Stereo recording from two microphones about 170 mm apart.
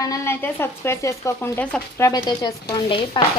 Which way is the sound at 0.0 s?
15° left (ahead or behind).